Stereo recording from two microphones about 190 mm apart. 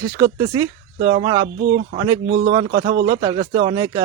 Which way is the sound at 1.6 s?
55° right (ahead or behind).